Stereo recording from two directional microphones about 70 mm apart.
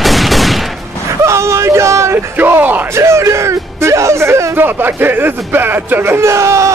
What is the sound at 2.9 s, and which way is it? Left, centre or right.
Speech, right.